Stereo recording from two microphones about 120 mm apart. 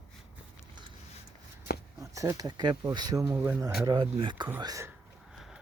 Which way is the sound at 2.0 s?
25° right (ahead or behind).